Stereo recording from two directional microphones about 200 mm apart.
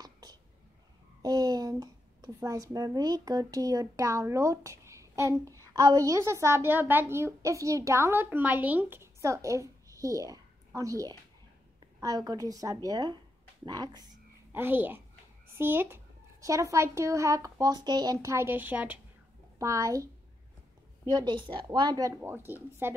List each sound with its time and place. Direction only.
0.0 s whispering: 20° right (ahead or behind)
1.2 s a woman's voice: 20° right (ahead or behind)
21.1 s a woman's voice: 20° right (ahead or behind)